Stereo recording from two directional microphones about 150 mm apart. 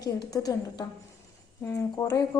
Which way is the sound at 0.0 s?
25° left (ahead or behind).